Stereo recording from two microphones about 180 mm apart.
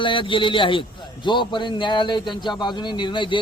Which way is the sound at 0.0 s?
30° left (ahead or behind).